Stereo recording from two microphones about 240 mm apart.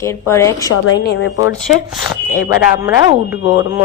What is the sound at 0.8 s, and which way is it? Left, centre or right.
Speech, left.